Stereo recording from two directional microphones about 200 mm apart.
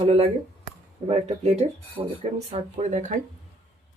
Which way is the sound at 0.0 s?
30° right (ahead or behind).